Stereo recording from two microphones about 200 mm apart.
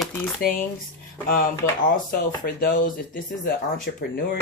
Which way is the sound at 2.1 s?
45° left (ahead or behind).